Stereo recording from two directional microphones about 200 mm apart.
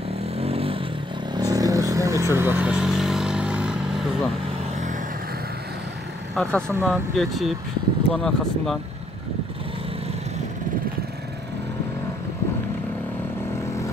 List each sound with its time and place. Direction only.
0.4 s a sound: 30° right (ahead or behind)
1.3 s vehicle: 20° right (ahead or behind)
6.3 s speech: 5° left (ahead or behind)
6.7 s speech: 10° right (ahead or behind)